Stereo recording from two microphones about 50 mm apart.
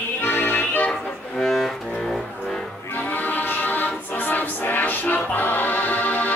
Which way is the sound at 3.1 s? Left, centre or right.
Left.